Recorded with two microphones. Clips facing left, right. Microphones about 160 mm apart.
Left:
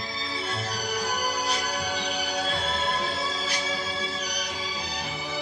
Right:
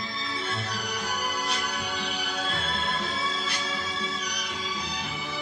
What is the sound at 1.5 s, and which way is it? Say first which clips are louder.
Music: left 3 dB; 35° left (ahead or behind).